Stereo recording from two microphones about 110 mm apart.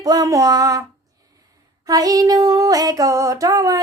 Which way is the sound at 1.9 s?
35° right (ahead or behind).